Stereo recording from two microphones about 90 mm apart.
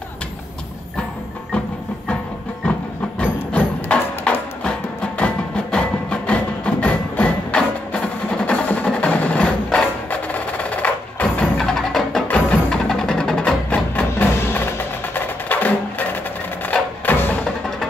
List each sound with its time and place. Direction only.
3.3 s music: 15° left (ahead or behind)
11.6 s music: 5° left (ahead or behind)
12.3 s wood block: 20° left (ahead or behind)
12.7 s music: 5° left (ahead or behind)
13.7 s music: 20° left (ahead or behind)
16.6 s wood block: 20° left (ahead or behind)
17.5 s music: 5° left (ahead or behind)